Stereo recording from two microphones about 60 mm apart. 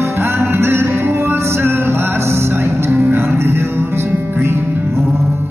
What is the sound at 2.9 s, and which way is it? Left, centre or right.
Music, right.